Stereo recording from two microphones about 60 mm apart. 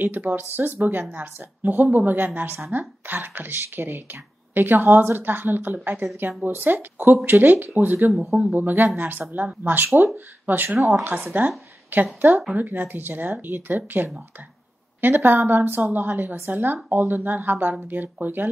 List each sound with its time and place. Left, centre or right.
0.0 s a woman's voice: right
8.1 s speech: centre
8.5 s a woman's voice: right